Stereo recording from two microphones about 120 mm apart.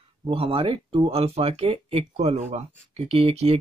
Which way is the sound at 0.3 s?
50° right (ahead or behind).